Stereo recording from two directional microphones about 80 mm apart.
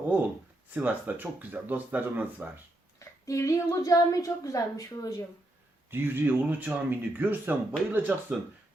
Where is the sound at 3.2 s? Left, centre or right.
Left.